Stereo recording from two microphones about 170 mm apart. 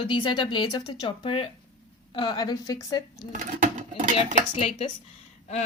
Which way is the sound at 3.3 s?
50° right (ahead or behind).